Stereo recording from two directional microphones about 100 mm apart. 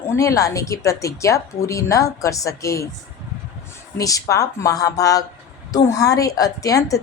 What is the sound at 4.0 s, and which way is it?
A woman's voice, 35° left (ahead or behind).